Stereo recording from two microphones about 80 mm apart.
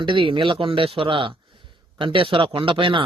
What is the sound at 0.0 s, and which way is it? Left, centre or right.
Speech, right.